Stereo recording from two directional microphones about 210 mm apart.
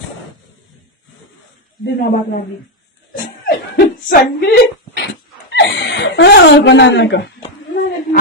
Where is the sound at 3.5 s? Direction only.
45° left (ahead or behind).